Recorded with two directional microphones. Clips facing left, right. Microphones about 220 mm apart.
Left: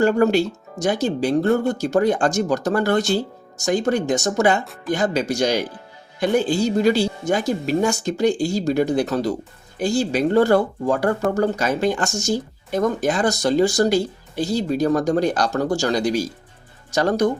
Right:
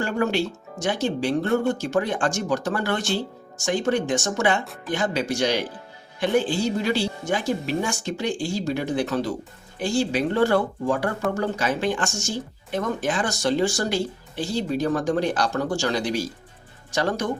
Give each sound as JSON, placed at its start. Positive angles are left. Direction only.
{"t": 0.0, "sound": "speech", "side_deg": 40}